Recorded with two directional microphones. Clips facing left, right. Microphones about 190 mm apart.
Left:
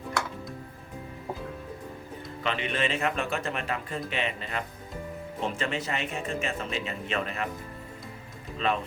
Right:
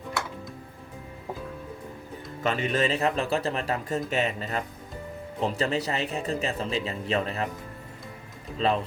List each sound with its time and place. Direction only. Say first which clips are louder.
2.4 s speech: right 4 dB; 45° right (ahead or behind)
8.5 s speech: right 3 dB; 35° right (ahead or behind)